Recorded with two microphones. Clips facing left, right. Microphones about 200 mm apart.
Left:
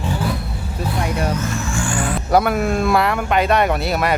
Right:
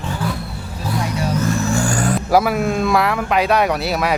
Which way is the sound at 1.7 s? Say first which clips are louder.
Right 3 dB; 40° right (ahead or behind).